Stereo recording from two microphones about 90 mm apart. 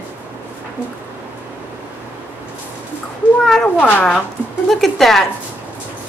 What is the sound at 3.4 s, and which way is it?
Speech, 5° left (ahead or behind).